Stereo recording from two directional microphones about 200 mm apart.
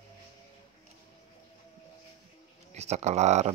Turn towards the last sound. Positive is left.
turn(degrees=-35)  # may be behind; listen again after turning